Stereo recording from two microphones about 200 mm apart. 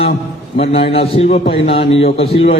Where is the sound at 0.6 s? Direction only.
30° left (ahead or behind).